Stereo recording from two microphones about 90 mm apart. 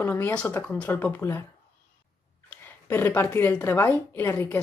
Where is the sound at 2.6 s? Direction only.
25° left (ahead or behind).